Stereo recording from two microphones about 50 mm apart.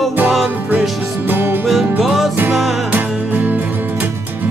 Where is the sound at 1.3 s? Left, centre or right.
Right.